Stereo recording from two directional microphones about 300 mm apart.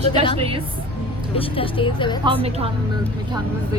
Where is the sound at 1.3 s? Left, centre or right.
Centre.